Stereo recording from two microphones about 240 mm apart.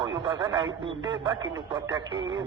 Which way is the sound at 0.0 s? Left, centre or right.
Centre.